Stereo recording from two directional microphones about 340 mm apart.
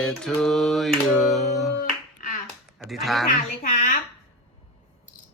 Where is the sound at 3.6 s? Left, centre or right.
Left.